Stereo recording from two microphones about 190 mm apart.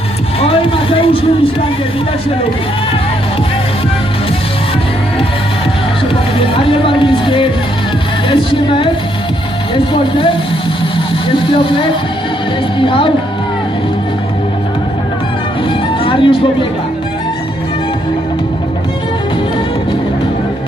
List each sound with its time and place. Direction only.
0.3 s a sound: 30° left (ahead or behind)
6.4 s music: 30° left (ahead or behind)
9.7 s speech: 25° left (ahead or behind)
16.0 s music: 25° left (ahead or behind)